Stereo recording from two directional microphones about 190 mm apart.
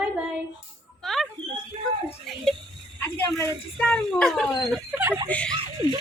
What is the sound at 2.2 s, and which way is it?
A woman's voice, centre (ahead or behind).